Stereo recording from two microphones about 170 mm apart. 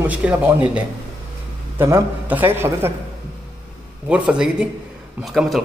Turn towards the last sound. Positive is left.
turn(degrees=0)  # may be behind; listen again after turning